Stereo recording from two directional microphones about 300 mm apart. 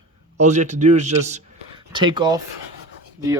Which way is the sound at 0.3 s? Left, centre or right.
Right.